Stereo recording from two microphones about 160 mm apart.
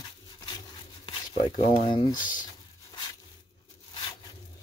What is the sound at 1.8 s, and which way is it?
Speech, 30° left (ahead or behind).